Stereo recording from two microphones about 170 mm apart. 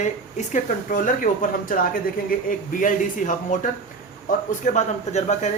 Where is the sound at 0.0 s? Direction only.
45° left (ahead or behind).